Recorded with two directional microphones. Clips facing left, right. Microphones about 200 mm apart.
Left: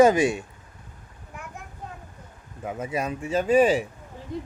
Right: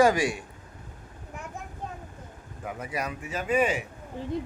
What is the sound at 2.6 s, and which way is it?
A man's voice, 25° left (ahead or behind).